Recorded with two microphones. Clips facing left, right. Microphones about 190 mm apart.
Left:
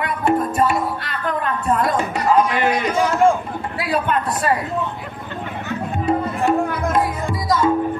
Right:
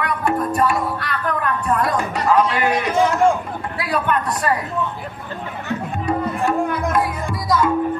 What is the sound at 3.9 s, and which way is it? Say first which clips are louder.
Speech: even; 25° left (ahead or behind).